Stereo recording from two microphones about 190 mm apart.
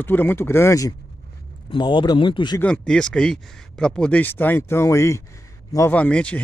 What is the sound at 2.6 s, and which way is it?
Speech, 5° left (ahead or behind).